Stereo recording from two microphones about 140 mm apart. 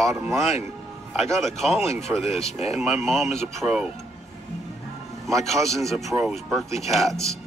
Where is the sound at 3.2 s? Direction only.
50° left (ahead or behind).